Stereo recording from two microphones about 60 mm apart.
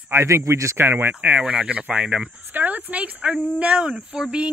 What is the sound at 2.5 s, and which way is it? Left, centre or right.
Speech, right.